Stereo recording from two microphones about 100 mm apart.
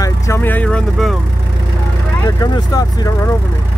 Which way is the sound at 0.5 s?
15° left (ahead or behind).